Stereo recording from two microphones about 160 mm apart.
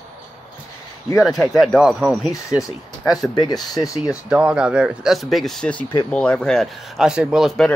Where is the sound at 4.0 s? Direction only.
5° right (ahead or behind).